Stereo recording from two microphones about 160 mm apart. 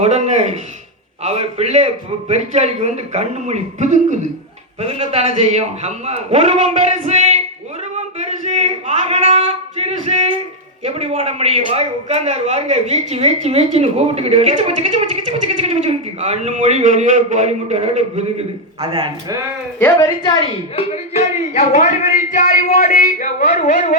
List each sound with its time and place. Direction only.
0.0 s a man's voice: 45° right (ahead or behind)
7.9 s a sound: 45° right (ahead or behind)
10.8 s a man's voice: 40° right (ahead or behind)
20.0 s a woman's voice: 30° left (ahead or behind)
20.9 s speech: 40° left (ahead or behind)